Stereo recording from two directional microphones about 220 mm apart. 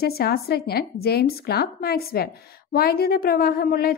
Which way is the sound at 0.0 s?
45° left (ahead or behind).